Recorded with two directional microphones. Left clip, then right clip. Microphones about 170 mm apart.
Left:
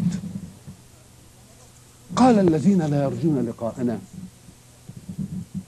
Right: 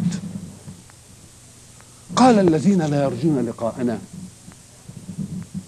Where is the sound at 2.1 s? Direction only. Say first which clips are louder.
Right 3 dB; 25° right (ahead or behind).